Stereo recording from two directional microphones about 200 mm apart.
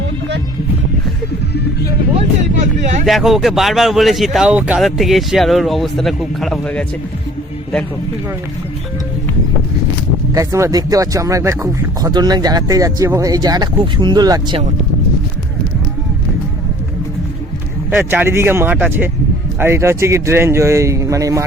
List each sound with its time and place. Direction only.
3.1 s speech: centre (ahead or behind)
10.3 s speech: 15° right (ahead or behind)
17.9 s speech: 10° right (ahead or behind)